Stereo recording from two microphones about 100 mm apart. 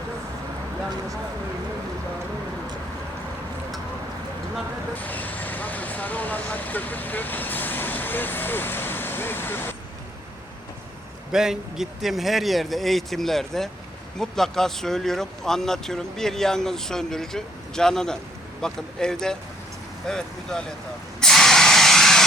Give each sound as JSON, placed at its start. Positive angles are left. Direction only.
{"t": 4.9, "sound": "speech", "side_deg": 15}
{"t": 11.3, "sound": "speech", "side_deg": -5}
{"t": 21.2, "sound": "spray", "side_deg": 5}